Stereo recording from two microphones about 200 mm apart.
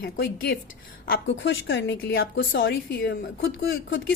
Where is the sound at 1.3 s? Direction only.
65° left (ahead or behind).